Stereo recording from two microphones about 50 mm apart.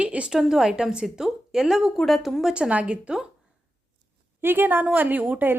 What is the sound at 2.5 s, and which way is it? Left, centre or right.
Speech, right.